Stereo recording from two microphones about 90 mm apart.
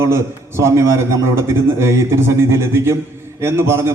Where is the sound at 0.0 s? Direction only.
30° right (ahead or behind).